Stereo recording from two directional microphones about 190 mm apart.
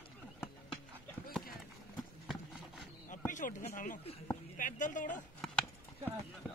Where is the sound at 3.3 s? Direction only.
40° left (ahead or behind).